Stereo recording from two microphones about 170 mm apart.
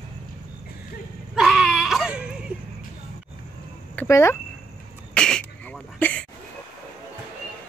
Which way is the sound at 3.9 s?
15° left (ahead or behind).